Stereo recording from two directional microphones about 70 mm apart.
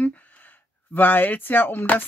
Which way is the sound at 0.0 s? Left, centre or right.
Left.